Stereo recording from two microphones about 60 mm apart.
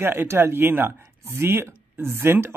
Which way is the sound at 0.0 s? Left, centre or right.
Right.